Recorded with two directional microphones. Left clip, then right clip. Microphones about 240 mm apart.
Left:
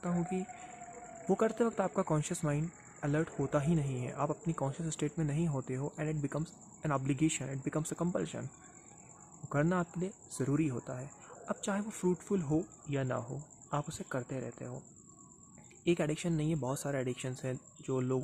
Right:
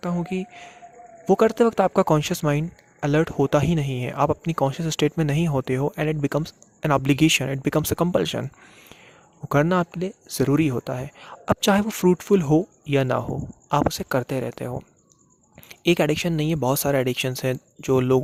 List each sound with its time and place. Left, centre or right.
0.0 s speech: right
9.5 s speech: right